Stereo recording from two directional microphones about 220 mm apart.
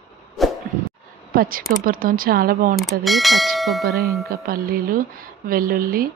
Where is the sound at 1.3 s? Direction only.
40° right (ahead or behind).